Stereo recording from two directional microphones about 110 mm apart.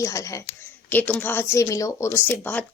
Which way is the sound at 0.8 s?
15° left (ahead or behind).